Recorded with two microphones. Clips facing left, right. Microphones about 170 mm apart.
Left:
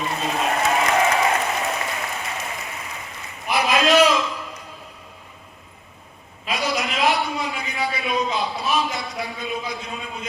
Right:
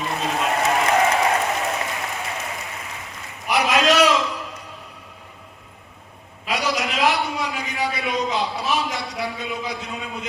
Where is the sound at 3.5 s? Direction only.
75° right (ahead or behind).